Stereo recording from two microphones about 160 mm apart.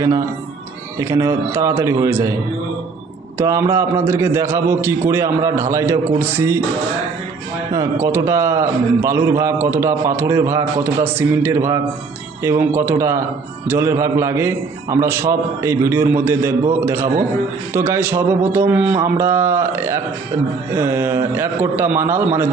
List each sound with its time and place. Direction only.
0.9 s a man's voice: 20° right (ahead or behind)
7.7 s a man's voice: 20° right (ahead or behind)